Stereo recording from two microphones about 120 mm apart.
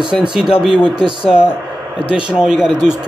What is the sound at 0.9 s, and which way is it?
Speech, 40° right (ahead or behind).